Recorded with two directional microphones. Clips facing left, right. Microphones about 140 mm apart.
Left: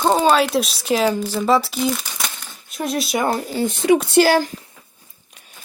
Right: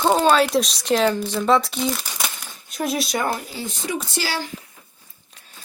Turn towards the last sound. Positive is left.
turn(degrees=50)  # may be behind; listen again after turning